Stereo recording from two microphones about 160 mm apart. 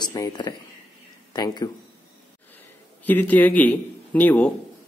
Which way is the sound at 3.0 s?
10° left (ahead or behind).